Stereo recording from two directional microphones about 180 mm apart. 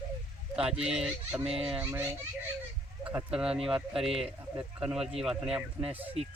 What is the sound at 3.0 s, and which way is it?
Speech, 5° right (ahead or behind).